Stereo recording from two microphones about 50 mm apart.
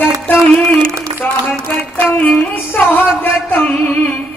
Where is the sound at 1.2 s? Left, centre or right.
Left.